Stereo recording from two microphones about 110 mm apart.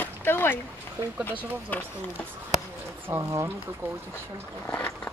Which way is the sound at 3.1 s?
30° right (ahead or behind).